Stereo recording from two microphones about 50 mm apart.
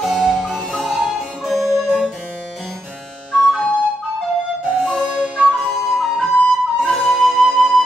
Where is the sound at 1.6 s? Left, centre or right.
Right.